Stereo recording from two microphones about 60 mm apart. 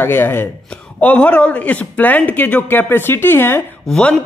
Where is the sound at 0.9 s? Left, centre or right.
Left.